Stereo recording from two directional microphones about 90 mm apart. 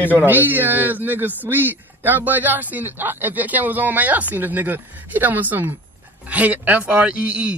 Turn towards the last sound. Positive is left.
turn(degrees=-15)  # may be behind; listen again after turning